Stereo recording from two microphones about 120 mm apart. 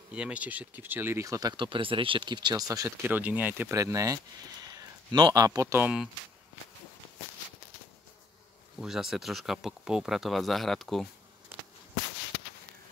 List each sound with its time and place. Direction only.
0.1 s speech: 10° right (ahead or behind); by 2.9 s 30° right (ahead or behind)
3.0 s speech: 15° right (ahead or behind)
8.7 s speech: 5° right (ahead or behind)